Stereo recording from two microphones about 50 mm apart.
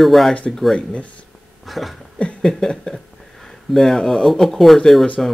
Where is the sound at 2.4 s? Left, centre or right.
Centre.